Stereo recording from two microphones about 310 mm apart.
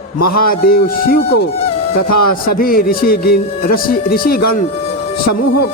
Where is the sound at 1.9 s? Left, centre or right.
Left.